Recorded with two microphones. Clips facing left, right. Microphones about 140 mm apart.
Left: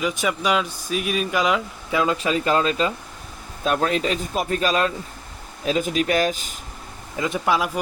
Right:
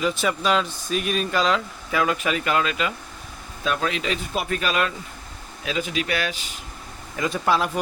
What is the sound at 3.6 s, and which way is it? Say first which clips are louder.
Speech: left 4 dB; 45° left (ahead or behind).